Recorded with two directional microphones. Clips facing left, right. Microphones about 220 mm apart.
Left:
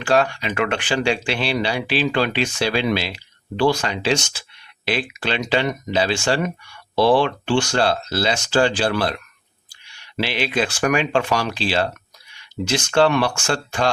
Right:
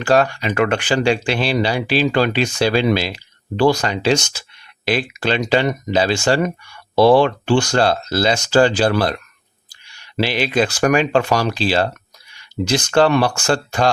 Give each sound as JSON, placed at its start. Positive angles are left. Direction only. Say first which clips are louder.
{"t": 0.0, "sound": "speech", "louder": "right 3 dB", "side_deg": -40}
{"t": 10.2, "sound": "speech", "louder": "right 4 dB", "side_deg": -40}